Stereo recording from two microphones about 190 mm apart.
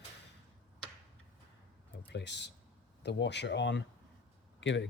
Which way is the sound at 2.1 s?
65° left (ahead or behind).